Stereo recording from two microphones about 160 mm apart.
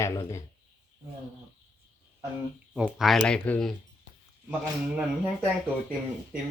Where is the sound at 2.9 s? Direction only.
Centre (ahead or behind).